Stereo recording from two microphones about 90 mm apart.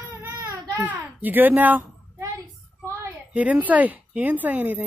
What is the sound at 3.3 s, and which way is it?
Speech, 15° right (ahead or behind).